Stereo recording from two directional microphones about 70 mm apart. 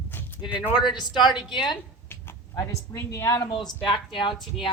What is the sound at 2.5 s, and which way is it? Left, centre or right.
Speech, left.